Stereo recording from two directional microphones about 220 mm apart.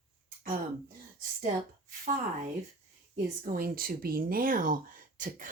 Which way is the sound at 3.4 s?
40° right (ahead or behind).